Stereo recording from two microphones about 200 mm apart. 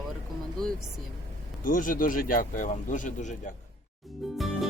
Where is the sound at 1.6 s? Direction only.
45° left (ahead or behind).